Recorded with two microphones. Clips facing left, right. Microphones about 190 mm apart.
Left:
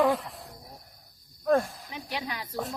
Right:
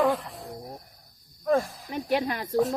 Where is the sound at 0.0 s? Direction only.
Centre (ahead or behind).